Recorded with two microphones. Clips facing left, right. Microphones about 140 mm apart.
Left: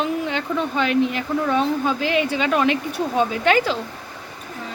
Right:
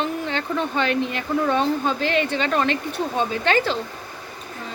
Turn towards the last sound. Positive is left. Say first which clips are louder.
# left 2 dB
turn(degrees=10)  # may be behind; listen again after turning